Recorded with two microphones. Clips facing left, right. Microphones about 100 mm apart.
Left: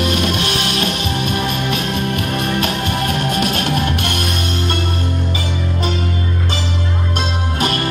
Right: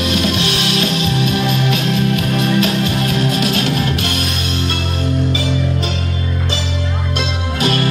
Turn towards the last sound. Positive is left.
turn(degrees=45)  # may be behind; listen again after turning